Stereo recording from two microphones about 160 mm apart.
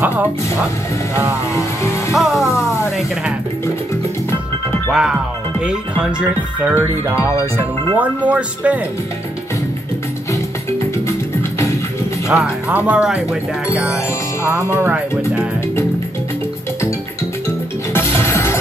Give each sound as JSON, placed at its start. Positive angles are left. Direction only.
{"t": 0.0, "sound": "speech", "side_deg": -10}
{"t": 1.6, "sound": "music", "side_deg": 20}
{"t": 2.1, "sound": "music", "side_deg": 0}
{"t": 2.5, "sound": "music", "side_deg": 20}
{"t": 5.6, "sound": "speech", "side_deg": -5}
{"t": 12.3, "sound": "speech", "side_deg": -5}
{"t": 18.1, "sound": "music", "side_deg": 15}